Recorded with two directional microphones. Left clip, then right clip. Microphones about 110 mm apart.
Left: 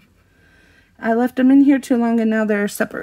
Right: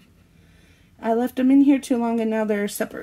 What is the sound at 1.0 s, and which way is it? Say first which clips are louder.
Speech: left 4 dB; 70° left (ahead or behind).